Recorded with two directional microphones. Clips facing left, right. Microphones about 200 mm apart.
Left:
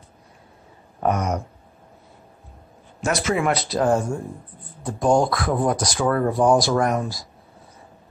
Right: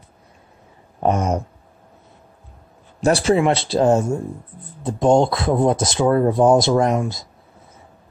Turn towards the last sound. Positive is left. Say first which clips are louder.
# right 3 dB
turn(degrees=-25)  # may be behind; listen again after turning